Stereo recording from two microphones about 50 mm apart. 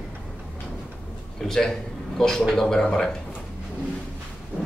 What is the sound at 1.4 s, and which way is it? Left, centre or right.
A man's voice, centre.